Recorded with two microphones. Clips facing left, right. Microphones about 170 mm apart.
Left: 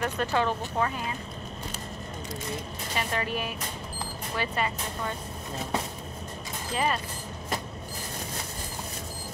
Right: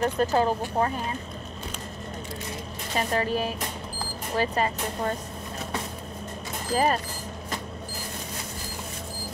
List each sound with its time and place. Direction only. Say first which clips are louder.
0.0 s speech: right 4 dB; 35° right (ahead or behind)
3.0 s speech: right 5 dB; 35° right (ahead or behind)
6.7 s speech: right 5 dB; 40° right (ahead or behind)